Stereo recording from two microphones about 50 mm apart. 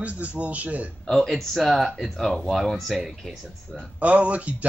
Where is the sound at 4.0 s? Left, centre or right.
Right.